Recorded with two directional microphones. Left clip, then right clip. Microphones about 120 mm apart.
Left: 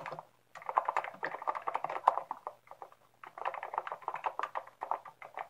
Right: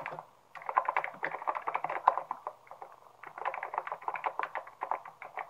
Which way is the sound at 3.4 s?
20° left (ahead or behind).